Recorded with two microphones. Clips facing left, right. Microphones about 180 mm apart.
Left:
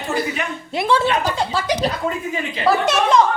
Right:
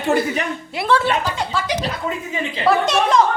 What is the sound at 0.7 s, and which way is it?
Speech, 15° left (ahead or behind).